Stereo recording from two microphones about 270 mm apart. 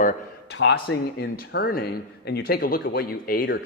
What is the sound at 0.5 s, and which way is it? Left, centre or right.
Speech, left.